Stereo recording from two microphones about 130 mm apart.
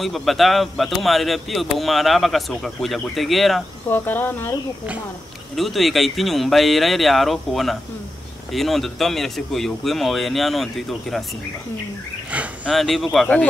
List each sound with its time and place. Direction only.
0.0 s speech: centre (ahead or behind)
3.9 s speech: 15° left (ahead or behind)
5.6 s speech: centre (ahead or behind)
12.3 s a sound: 10° right (ahead or behind)
12.7 s speech: centre (ahead or behind)